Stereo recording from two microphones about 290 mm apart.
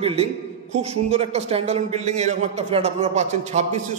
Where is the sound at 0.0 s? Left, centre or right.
Right.